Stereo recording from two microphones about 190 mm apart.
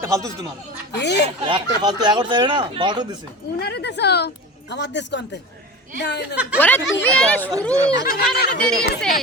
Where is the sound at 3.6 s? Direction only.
60° left (ahead or behind).